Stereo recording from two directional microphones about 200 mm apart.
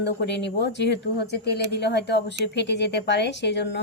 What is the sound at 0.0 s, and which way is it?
A woman's voice, 60° left (ahead or behind).